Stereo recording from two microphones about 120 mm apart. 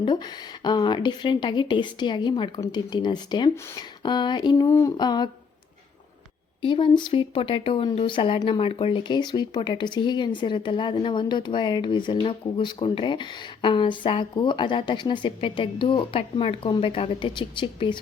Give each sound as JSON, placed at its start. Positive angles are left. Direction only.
{"t": 0.0, "sound": "speech", "side_deg": 40}
{"t": 4.6, "sound": "speech", "side_deg": 25}
{"t": 6.6, "sound": "speech", "side_deg": 45}